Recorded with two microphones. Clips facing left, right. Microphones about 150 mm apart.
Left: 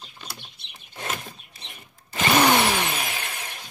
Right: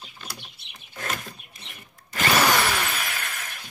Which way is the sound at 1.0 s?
25° left (ahead or behind).